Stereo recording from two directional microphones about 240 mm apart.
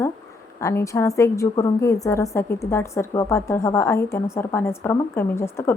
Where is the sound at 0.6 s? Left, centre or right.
Centre.